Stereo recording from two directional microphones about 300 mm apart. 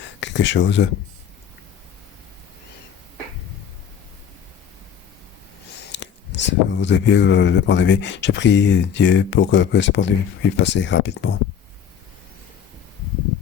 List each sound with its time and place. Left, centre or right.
0.2 s speech: left
5.9 s speech: left